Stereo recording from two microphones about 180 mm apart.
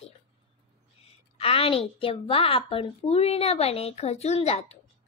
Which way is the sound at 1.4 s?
30° left (ahead or behind).